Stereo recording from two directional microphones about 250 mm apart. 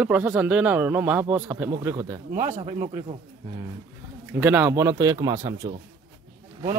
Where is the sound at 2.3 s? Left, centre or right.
Right.